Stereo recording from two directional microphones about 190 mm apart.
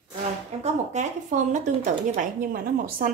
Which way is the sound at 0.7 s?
40° right (ahead or behind).